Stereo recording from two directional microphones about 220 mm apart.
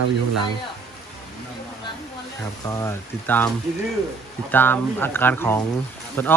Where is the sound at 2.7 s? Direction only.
10° left (ahead or behind).